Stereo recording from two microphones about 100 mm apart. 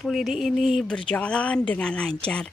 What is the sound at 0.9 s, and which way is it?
Music, 10° left (ahead or behind).